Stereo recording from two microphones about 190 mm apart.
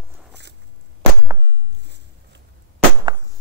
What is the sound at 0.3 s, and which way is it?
Walk, 65° right (ahead or behind).